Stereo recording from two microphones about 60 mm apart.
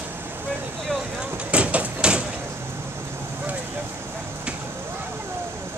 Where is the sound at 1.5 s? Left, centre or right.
Right.